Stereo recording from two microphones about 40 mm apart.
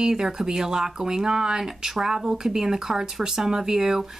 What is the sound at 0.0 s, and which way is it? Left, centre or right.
Speech, centre.